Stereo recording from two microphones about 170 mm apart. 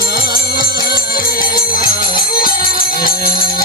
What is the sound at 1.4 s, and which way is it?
Music, 60° left (ahead or behind).